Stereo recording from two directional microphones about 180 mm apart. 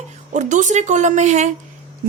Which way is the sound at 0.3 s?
40° right (ahead or behind).